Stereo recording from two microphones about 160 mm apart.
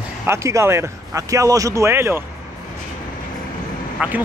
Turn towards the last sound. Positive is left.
turn(degrees=-10)  # may be behind; listen again after turning